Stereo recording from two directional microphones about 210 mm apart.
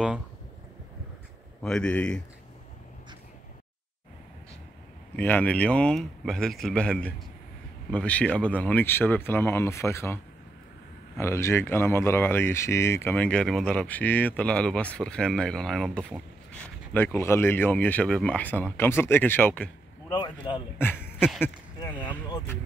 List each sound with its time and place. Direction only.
1.6 s speech: 5° left (ahead or behind)
5.1 s speech: 5° left (ahead or behind)
20.1 s a man's voice: 20° left (ahead or behind)
20.7 s speech: 10° left (ahead or behind)
21.7 s basketball bounce: 15° left (ahead or behind)